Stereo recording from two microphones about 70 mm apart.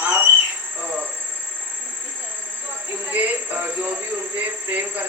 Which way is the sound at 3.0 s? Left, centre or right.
Right.